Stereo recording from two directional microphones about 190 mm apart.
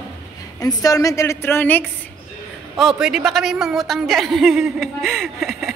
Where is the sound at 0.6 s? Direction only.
20° left (ahead or behind).